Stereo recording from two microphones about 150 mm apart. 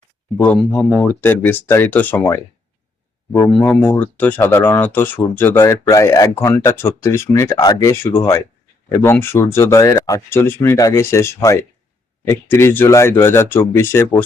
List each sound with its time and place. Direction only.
0.3 s speech: 10° left (ahead or behind)